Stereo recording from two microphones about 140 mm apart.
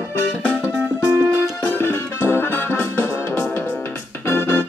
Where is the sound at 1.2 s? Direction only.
20° right (ahead or behind).